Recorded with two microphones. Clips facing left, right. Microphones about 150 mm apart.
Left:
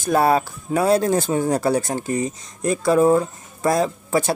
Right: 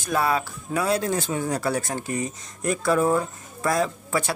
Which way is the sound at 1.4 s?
30° left (ahead or behind).